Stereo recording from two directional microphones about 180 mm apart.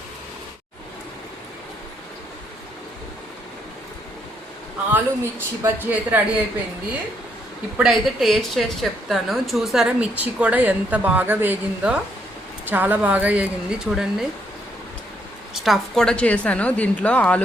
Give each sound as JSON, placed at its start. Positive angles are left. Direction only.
{"t": 4.9, "sound": "speech", "side_deg": -10}
{"t": 7.8, "sound": "speech", "side_deg": 0}
{"t": 15.6, "sound": "a woman's voice", "side_deg": 0}